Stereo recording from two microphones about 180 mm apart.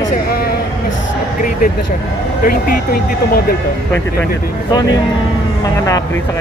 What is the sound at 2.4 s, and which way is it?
Speech, 55° left (ahead or behind).